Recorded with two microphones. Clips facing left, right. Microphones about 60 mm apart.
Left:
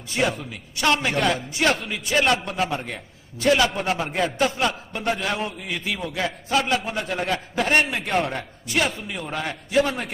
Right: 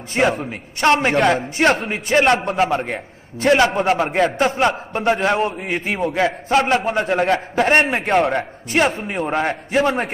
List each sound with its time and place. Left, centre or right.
0.1 s a man's voice: right
2.7 s a man's voice: right
8.6 s a man's voice: right